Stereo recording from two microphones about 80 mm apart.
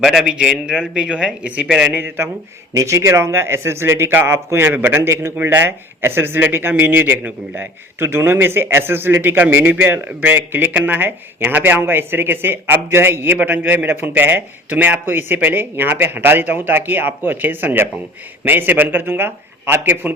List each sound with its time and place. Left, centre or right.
0.0 s a man's voice: centre
0.3 s speech: centre
1.9 s a man's voice: right
2.7 s a man's voice: right